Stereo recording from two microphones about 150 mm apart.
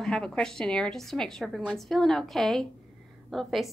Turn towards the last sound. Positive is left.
turn(degrees=0)  # may be behind; listen again after turning